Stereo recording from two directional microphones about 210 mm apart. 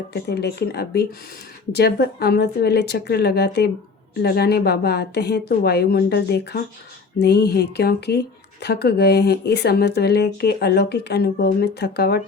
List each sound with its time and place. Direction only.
0.1 s speech: 50° left (ahead or behind)